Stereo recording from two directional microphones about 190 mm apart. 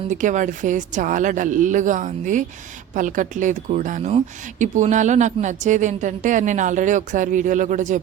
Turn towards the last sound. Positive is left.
turn(degrees=-40)  # may be behind; listen again after turning